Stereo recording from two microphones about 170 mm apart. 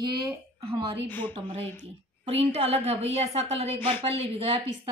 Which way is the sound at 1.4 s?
35° right (ahead or behind).